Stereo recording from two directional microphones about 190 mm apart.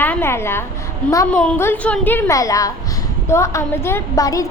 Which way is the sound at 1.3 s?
5° left (ahead or behind).